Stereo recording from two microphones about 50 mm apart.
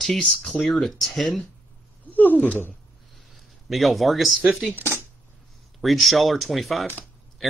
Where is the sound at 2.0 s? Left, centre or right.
Left.